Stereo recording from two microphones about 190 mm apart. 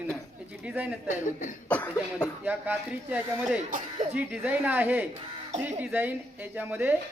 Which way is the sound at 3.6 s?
45° right (ahead or behind).